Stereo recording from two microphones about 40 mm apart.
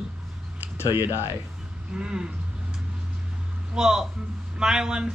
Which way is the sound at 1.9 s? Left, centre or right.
Right.